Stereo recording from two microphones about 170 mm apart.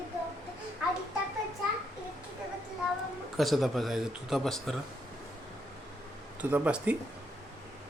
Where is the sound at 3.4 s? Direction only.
Centre (ahead or behind).